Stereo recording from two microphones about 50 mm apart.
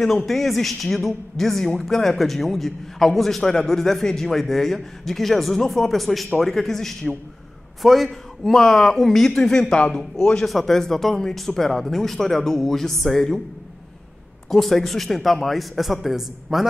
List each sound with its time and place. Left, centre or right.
0.0 s a woman's voice: centre
10.4 s speech: centre
14.5 s a woman's voice: centre